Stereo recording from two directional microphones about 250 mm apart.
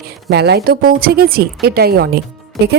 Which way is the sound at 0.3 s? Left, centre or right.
Right.